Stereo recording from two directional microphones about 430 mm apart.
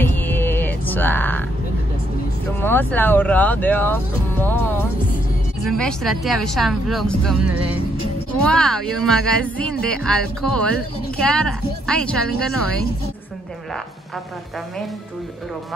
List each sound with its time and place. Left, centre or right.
0.0 s music: centre
2.6 s a woman's voice: centre